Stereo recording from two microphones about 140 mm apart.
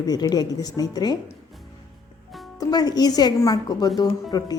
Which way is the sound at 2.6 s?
30° left (ahead or behind).